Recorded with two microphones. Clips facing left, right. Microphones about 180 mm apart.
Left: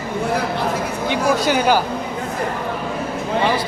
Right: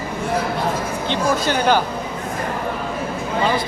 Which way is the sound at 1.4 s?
10° left (ahead or behind).